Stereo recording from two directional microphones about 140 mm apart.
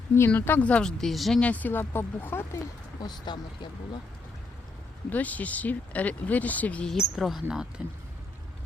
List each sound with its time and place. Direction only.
0.2 s speech: 15° left (ahead or behind)
3.0 s speech: 30° left (ahead or behind)
5.0 s speech: 10° left (ahead or behind); by 7.7 s 5° right (ahead or behind)